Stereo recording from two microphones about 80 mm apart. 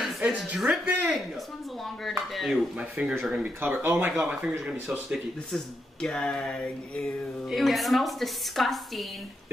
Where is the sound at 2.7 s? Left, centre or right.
Centre.